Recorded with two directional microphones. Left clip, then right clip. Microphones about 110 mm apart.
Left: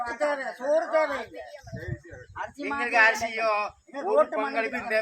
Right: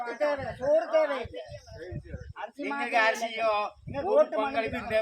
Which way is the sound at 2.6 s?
15° left (ahead or behind).